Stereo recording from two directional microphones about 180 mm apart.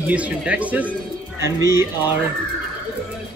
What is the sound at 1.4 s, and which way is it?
Speech, 20° right (ahead or behind).